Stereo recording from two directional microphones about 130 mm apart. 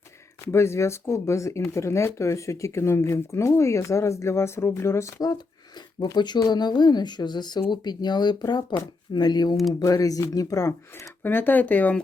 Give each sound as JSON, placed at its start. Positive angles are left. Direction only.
{"t": 0.5, "sound": "speech", "side_deg": 20}